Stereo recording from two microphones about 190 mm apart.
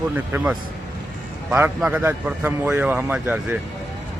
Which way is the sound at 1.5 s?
10° right (ahead or behind).